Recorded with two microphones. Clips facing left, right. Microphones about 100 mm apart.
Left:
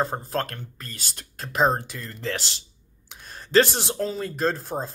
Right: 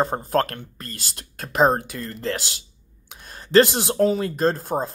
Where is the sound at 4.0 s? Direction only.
40° right (ahead or behind).